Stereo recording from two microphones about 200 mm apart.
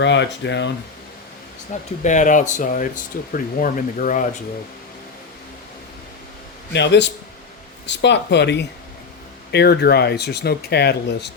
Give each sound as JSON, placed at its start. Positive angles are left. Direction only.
{"t": 0.0, "sound": "speech", "side_deg": 60}
{"t": 1.7, "sound": "speech", "side_deg": 40}
{"t": 6.7, "sound": "speech", "side_deg": 60}